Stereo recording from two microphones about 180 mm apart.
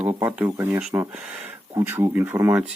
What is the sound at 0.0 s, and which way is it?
Speech, 10° right (ahead or behind).